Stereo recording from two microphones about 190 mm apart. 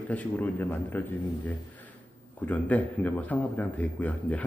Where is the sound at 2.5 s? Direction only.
10° left (ahead or behind).